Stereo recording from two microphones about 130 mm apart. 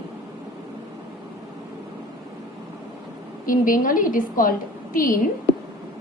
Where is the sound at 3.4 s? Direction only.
90° left.